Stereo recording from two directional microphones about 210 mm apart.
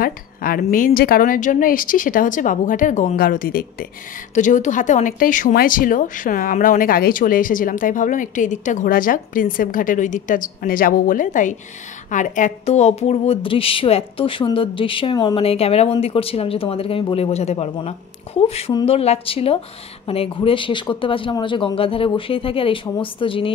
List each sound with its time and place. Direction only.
0.0 s a woman's voice: 45° left (ahead or behind); by 23.5 s 25° left (ahead or behind)